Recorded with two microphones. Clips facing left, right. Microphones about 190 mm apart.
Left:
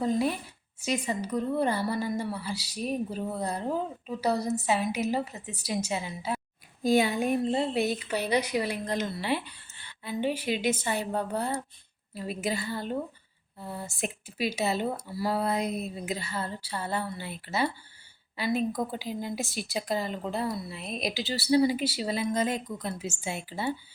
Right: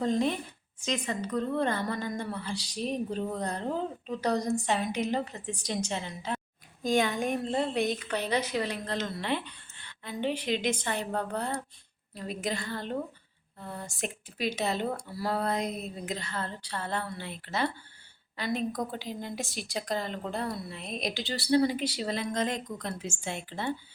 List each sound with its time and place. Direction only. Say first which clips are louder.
0.0 s a woman's voice: even; 5° left (ahead or behind)